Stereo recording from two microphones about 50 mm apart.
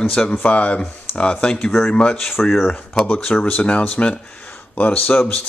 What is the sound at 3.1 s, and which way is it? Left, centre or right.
Speech, left.